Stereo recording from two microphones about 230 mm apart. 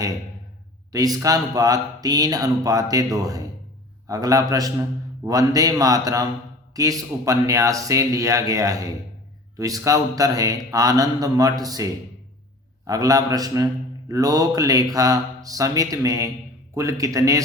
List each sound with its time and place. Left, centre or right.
0.9 s a man's voice: centre